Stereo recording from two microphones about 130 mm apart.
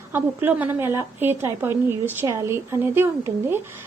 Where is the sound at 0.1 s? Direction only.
15° right (ahead or behind).